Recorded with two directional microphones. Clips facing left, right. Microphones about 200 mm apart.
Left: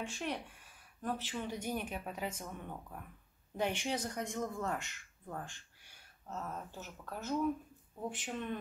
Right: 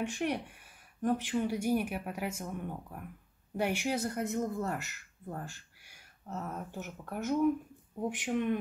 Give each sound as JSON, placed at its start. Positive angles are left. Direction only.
{"t": 1.0, "sound": "speech", "side_deg": -15}